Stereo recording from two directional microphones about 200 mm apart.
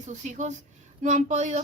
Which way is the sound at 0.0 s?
40° right (ahead or behind).